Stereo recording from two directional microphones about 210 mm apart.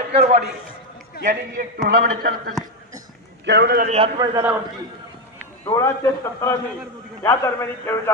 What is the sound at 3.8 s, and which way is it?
Speech, 30° right (ahead or behind).